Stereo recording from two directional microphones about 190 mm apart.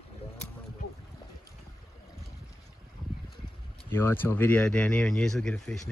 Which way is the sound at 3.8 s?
10° left (ahead or behind).